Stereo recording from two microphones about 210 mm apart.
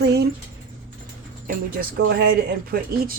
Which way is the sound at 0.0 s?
50° right (ahead or behind).